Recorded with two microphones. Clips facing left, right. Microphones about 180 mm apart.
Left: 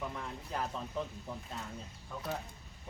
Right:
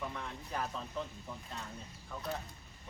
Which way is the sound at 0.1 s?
5° left (ahead or behind).